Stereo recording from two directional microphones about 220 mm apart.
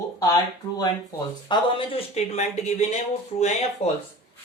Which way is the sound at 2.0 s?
30° left (ahead or behind).